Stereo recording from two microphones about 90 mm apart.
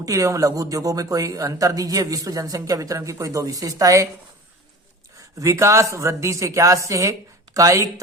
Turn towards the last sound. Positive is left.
turn(degrees=-35)  # may be behind; listen again after turning